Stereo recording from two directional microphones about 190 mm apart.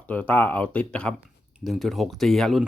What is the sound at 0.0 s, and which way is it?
Speech, 10° left (ahead or behind).